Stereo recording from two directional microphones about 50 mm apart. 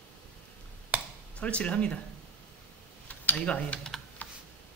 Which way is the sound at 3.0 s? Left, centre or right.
Left.